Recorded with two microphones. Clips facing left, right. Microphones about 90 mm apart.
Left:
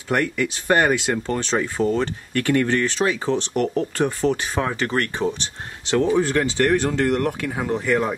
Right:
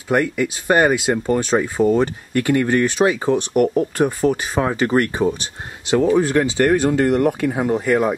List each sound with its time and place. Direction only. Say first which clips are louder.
0.1 s speech: right 3 dB; 10° right (ahead or behind)